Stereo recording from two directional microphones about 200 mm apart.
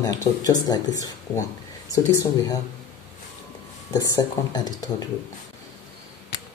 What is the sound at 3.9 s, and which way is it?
Speech, 20° left (ahead or behind).